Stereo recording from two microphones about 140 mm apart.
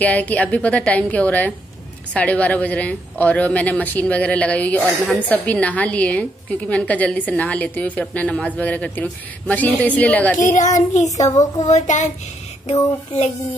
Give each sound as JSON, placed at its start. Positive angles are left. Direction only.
{"t": 0.0, "sound": "speech", "side_deg": 10}
{"t": 10.3, "sound": "a child's voice", "side_deg": 65}
{"t": 10.9, "sound": "a child's voice", "side_deg": 55}
{"t": 11.1, "sound": "a woman's voice", "side_deg": 25}
{"t": 11.6, "sound": "a child's voice", "side_deg": 55}